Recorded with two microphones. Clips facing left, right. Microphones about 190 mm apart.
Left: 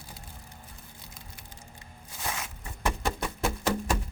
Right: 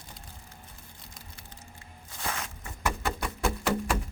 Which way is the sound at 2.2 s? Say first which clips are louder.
Right 1 dB; 10° left (ahead or behind).